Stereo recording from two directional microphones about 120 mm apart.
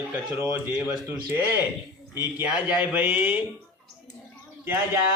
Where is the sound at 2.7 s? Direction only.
15° right (ahead or behind).